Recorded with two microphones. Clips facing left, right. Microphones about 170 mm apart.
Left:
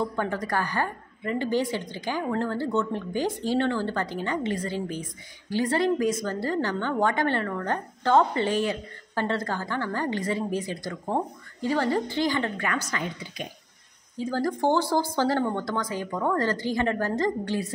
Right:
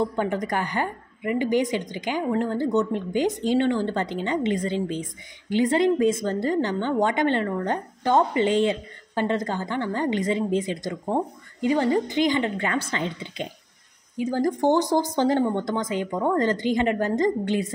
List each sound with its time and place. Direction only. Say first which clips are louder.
0.0 s a woman's voice: right 3 dB; 20° right (ahead or behind)